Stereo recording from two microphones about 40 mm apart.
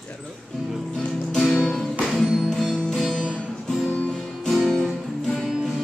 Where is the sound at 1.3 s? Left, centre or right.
Centre.